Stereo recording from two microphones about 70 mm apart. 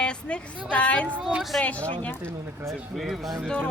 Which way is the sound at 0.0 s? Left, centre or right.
Centre.